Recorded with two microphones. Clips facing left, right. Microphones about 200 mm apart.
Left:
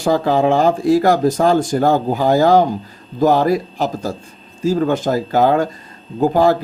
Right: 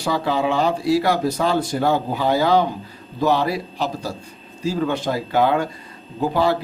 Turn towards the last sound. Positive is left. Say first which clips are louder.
# left 6 dB
turn(degrees=45)  # may be behind; listen again after turning